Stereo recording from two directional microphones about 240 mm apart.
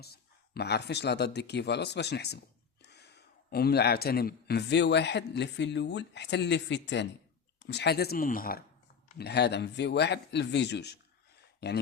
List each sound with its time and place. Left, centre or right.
0.0 s speech: left